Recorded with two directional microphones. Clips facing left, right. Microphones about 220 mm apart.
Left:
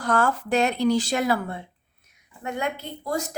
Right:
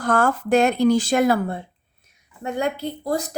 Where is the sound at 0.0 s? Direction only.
50° right (ahead or behind).